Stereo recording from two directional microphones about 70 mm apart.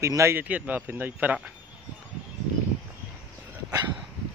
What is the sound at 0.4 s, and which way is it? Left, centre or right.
Speech, right.